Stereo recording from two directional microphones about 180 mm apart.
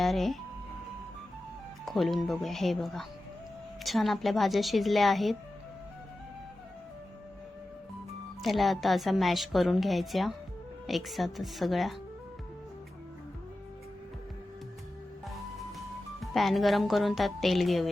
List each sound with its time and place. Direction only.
0.0 s speech: centre (ahead or behind)
1.8 s a woman's voice: centre (ahead or behind)
8.4 s a woman's voice: centre (ahead or behind)
16.2 s a woman's voice: centre (ahead or behind)